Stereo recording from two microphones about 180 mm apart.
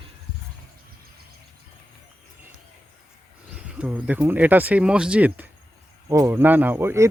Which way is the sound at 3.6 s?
5° right (ahead or behind).